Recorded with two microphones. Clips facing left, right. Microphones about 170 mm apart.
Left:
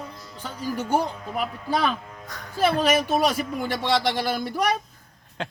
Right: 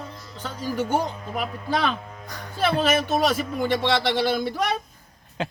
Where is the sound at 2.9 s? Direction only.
10° left (ahead or behind).